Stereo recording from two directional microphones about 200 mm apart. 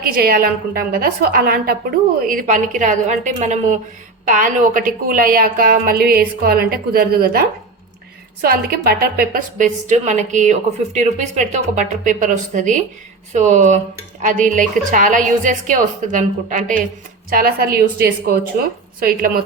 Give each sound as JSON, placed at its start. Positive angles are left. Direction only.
{"t": 0.0, "sound": "a woman's voice", "side_deg": -50}